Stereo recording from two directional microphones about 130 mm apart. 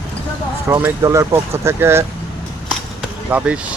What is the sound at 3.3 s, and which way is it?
Speech, 10° right (ahead or behind).